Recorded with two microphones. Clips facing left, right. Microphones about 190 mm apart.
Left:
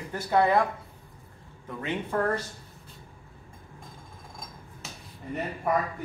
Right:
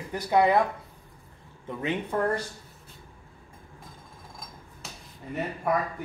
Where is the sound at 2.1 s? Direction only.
15° right (ahead or behind).